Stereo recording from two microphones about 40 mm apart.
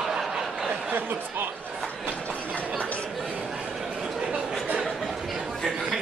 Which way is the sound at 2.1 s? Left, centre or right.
Left.